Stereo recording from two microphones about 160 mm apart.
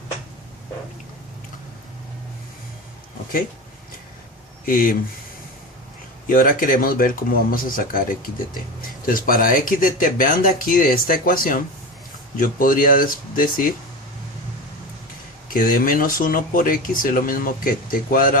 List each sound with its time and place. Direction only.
4.6 s speech: 60° left (ahead or behind)
6.2 s speech: 60° left (ahead or behind)
15.4 s speech: 60° left (ahead or behind)